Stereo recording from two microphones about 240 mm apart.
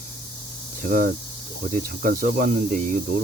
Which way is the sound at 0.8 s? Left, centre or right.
Right.